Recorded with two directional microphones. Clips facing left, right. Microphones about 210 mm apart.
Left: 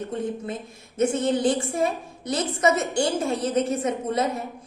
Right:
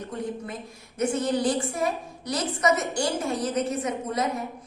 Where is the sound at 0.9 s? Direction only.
25° left (ahead or behind).